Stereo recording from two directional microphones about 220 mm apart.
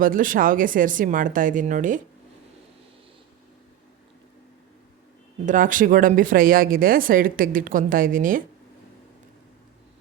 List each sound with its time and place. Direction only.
0.0 s speech: 40° right (ahead or behind)
5.5 s speech: 35° right (ahead or behind)